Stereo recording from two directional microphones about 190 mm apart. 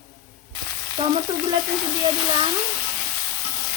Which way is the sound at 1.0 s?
30° right (ahead or behind).